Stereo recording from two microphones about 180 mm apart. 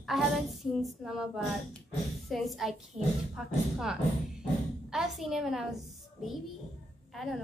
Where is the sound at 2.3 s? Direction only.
Centre (ahead or behind).